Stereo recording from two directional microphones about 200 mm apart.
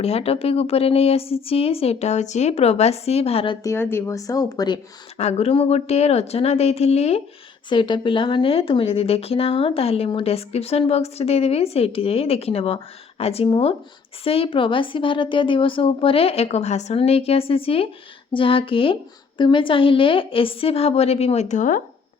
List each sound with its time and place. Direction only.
0.0 s speech: 30° left (ahead or behind)
5.1 s a woman's voice: 30° left (ahead or behind)